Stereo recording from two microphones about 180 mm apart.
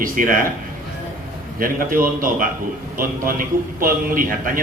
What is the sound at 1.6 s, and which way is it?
A man's voice, 50° right (ahead or behind).